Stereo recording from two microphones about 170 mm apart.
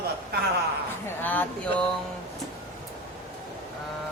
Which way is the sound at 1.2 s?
10° left (ahead or behind).